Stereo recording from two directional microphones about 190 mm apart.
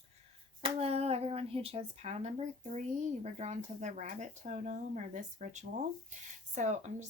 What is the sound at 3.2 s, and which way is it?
Speech, 35° right (ahead or behind).